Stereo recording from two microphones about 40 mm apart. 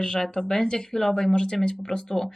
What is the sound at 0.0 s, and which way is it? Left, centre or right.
Speech, centre.